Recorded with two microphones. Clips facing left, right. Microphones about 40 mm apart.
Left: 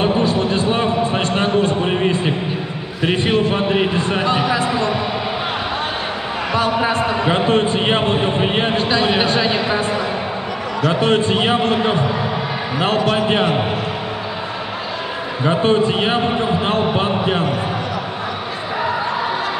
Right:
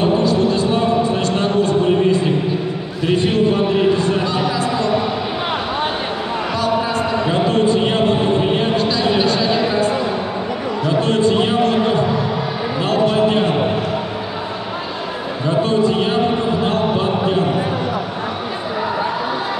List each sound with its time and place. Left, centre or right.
0.0 s a sound: left
6.5 s a sound: left
10.9 s a man's voice: left
12.7 s basketball bounce: left
13.1 s speech: left
15.4 s a man's voice: left